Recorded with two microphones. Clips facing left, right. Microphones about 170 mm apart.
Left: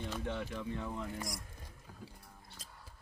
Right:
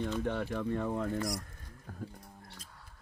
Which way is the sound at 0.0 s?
60° right (ahead or behind).